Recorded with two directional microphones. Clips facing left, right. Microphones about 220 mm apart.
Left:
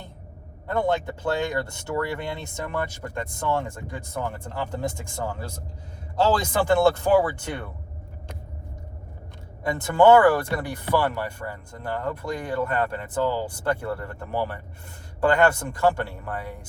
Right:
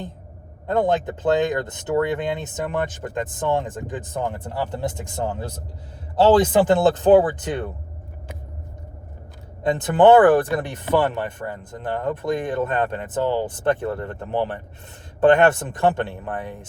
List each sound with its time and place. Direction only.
0.7 s speech: 20° right (ahead or behind)
6.6 s speech: 20° right (ahead or behind)
9.6 s speech: 20° right (ahead or behind)